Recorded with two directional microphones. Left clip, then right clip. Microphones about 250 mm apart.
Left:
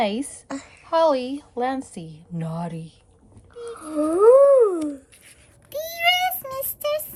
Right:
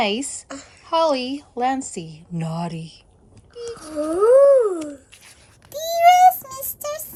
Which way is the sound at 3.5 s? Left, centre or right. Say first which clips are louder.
Even; left.